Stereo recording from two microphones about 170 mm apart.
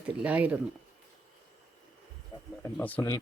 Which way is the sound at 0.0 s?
10° right (ahead or behind).